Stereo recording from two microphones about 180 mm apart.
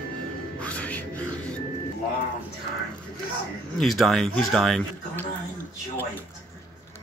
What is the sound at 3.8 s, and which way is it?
Speech, centre (ahead or behind).